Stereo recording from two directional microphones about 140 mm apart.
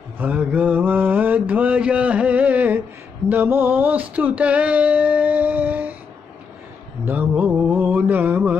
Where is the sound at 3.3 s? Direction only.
15° right (ahead or behind).